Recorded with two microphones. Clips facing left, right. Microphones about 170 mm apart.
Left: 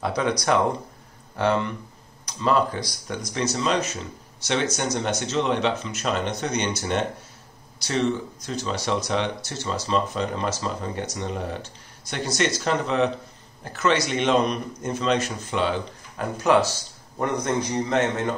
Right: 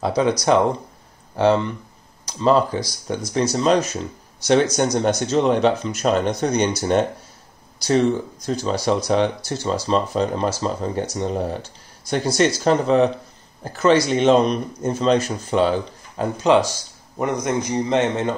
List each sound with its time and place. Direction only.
0.0 s speech: 30° right (ahead or behind)
1.3 s a man's voice: 30° right (ahead or behind)
16.2 s a man's voice: 20° right (ahead or behind)